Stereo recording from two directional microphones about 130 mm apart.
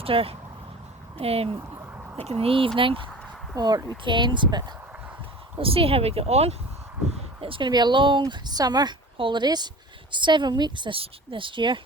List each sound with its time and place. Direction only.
0.0 s a woman's voice: 45° right (ahead or behind)
3.5 s a woman's voice: 30° right (ahead or behind)
5.5 s speech: 45° right (ahead or behind)
7.4 s a woman's voice: 40° right (ahead or behind)